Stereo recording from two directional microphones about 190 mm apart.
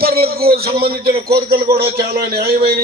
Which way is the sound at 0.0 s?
55° right (ahead or behind).